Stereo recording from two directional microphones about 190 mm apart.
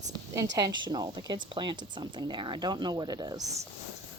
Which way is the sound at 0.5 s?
20° right (ahead or behind).